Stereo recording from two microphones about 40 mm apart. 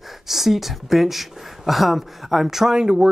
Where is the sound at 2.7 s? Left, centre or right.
Centre.